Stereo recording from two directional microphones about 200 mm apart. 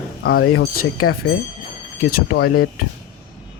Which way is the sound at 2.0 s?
50° left (ahead or behind).